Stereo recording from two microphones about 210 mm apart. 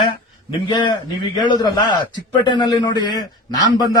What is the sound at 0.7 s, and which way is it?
Speech, 20° left (ahead or behind).